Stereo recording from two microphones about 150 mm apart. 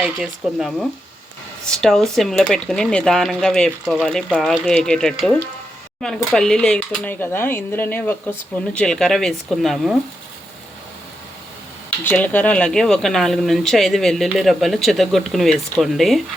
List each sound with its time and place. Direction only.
0.0 s speech: centre (ahead or behind)
12.0 s speech: 10° left (ahead or behind)